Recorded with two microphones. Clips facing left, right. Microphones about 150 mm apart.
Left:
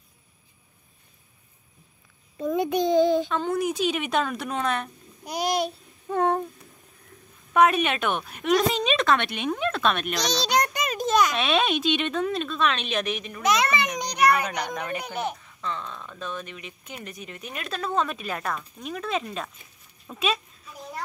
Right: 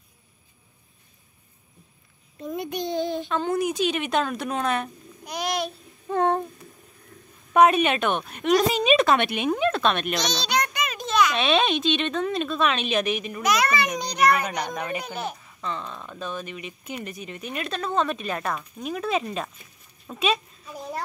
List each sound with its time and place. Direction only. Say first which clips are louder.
2.4 s a child's voice: left 6 dB; 90° left
3.3 s speech: right 1 dB; centre (ahead or behind)
5.2 s babbling: left 2 dB; 35° left (ahead or behind)
6.0 s a sound: right 1 dB; 5° left (ahead or behind)
7.5 s speech: right 3 dB; centre (ahead or behind)
10.5 s a sound: left 2 dB; 40° left (ahead or behind)
11.3 s speech: right 2 dB; 5° left (ahead or behind)
13.4 s a child's voice: left 1 dB; 25° left (ahead or behind)
14.3 s speech: even; 10° right (ahead or behind)